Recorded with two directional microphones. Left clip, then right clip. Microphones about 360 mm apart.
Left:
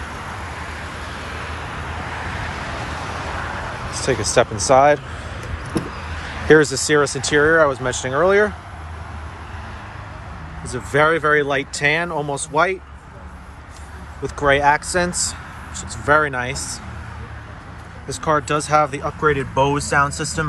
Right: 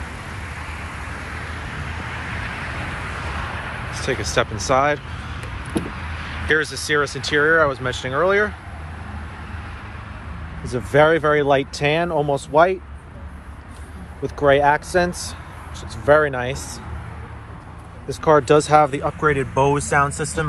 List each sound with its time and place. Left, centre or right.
0.6 s vehicle: left
4.0 s speech: centre
6.5 s speech: centre
10.6 s speech: centre
14.2 s speech: centre
18.0 s speech: centre